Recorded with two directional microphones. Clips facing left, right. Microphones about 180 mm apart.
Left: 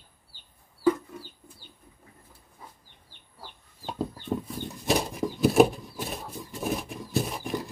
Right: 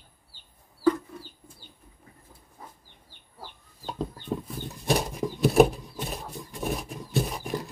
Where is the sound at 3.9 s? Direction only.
Centre (ahead or behind).